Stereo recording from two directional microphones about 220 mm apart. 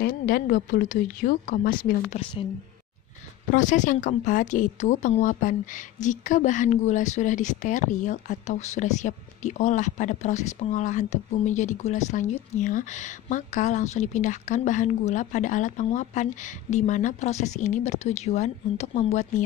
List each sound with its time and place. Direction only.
0.0 s a woman's voice: 40° left (ahead or behind)
3.5 s a woman's voice: 35° left (ahead or behind)